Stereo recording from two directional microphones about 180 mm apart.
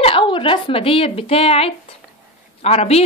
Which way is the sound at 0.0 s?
30° left (ahead or behind).